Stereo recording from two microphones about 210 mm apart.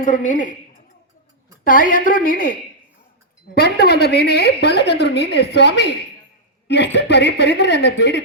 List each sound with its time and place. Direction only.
0.0 s a woman's voice: 35° left (ahead or behind)
1.6 s a woman's voice: 40° left (ahead or behind)